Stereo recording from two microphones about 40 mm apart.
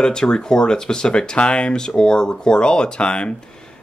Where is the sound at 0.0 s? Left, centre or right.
Centre.